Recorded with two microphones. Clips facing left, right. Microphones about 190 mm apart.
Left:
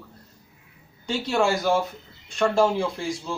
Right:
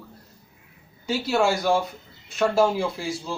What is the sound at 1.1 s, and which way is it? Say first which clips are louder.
Speech: right 1 dB; 5° right (ahead or behind).